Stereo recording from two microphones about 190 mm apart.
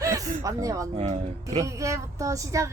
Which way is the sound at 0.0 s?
15° right (ahead or behind).